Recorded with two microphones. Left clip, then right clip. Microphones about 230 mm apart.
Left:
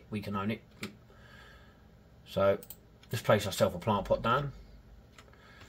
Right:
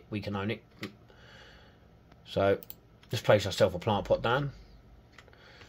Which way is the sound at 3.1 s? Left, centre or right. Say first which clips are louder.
Right 3 dB; right.